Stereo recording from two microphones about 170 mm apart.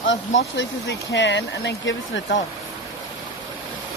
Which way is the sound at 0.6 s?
90° left.